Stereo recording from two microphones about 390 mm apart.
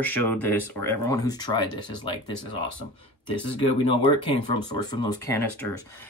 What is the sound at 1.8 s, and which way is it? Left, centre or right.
Speech, left.